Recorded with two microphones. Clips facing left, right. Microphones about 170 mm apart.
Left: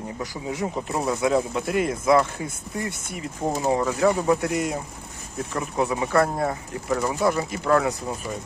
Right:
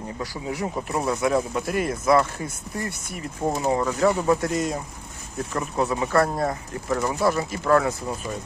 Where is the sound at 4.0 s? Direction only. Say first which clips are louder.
Right 1 dB; 15° left (ahead or behind).